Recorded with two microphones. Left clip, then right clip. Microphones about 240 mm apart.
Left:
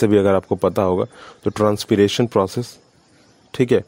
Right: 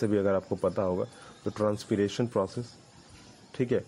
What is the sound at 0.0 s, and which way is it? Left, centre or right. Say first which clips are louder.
Speech: left 12 dB; left.